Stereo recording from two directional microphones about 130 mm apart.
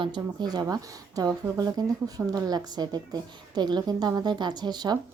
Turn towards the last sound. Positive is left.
turn(degrees=-30)  # may be behind; listen again after turning